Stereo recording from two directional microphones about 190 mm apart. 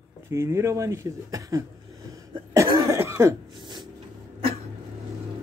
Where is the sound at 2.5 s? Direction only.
15° right (ahead or behind).